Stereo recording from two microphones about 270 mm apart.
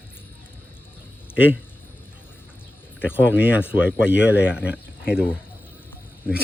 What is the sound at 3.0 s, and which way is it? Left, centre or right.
A man's voice, centre.